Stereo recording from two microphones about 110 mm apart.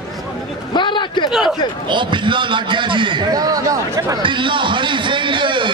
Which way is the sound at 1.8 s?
45° right (ahead or behind).